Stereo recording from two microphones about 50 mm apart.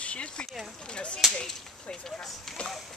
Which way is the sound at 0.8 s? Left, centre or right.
Centre.